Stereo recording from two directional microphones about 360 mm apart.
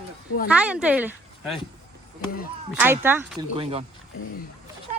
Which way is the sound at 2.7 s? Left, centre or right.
Centre.